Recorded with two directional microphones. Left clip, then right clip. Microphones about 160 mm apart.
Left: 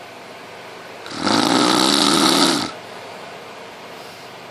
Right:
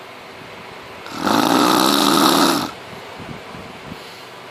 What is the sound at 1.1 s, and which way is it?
Snoring, 15° left (ahead or behind).